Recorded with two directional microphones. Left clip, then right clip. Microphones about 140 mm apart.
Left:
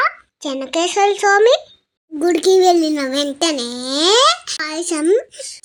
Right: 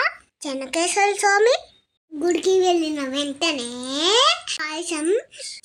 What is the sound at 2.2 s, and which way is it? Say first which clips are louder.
A child's voice: left 6 dB; 45° left (ahead or behind).